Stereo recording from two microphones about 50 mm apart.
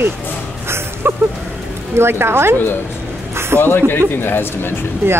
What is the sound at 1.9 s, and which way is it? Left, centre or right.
Speech, right.